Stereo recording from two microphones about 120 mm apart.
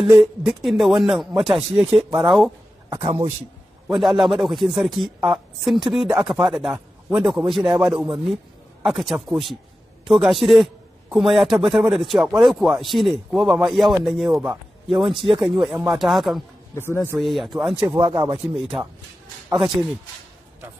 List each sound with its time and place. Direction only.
0.2 s a woman's voice: centre (ahead or behind)
3.0 s a man's voice: 55° right (ahead or behind)
3.9 s a woman's voice: centre (ahead or behind)
16.7 s speech: 20° left (ahead or behind)
17.2 s a woman's voice: centre (ahead or behind)
17.9 s speech: 35° right (ahead or behind)
18.4 s a woman's voice: 5° right (ahead or behind)